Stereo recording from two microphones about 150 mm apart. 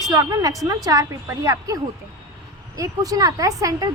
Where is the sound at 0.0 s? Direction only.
25° right (ahead or behind).